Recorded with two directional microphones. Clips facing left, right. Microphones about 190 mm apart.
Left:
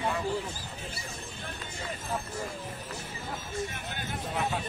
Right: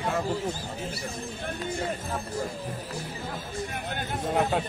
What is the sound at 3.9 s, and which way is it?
Speech, 50° right (ahead or behind).